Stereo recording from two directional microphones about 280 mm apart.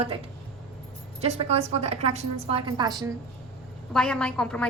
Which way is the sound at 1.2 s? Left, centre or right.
Right.